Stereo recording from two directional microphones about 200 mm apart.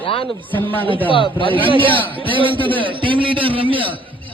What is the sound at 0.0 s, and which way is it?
Speech, 25° left (ahead or behind).